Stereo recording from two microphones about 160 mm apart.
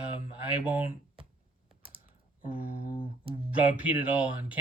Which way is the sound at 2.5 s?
35° left (ahead or behind).